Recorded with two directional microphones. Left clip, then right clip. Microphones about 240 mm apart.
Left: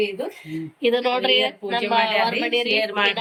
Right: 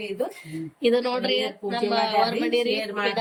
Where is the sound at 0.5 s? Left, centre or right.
Centre.